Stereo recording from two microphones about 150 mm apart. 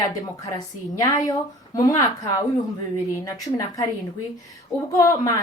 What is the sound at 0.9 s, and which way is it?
A woman's voice, 25° left (ahead or behind).